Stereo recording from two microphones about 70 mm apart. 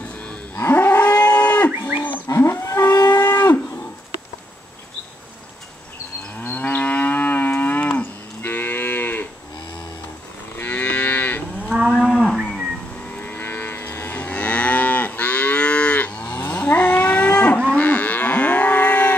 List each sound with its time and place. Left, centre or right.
0.6 s moo: left
2.2 s livestock: left
2.9 s livestock: left
3.4 s cattle: left
6.3 s moo: left
10.5 s livestock: left
12.0 s moo: centre
13.2 s moo: left
17.8 s livestock: left